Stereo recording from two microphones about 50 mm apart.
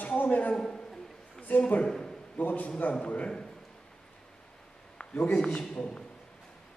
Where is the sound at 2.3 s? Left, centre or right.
Left.